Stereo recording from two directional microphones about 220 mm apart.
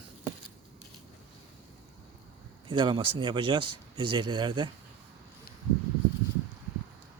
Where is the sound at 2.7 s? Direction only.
20° right (ahead or behind).